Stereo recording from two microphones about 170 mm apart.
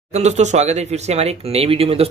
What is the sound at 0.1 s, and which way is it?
Speech, 40° right (ahead or behind).